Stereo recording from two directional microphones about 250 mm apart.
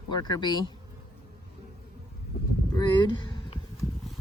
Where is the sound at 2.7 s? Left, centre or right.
Centre.